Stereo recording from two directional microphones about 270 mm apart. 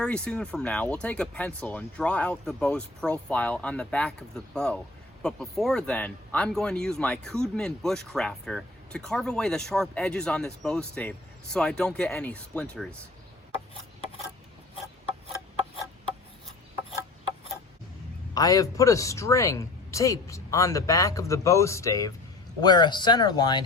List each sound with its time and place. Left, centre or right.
0.0 s speech: centre
18.3 s speech: centre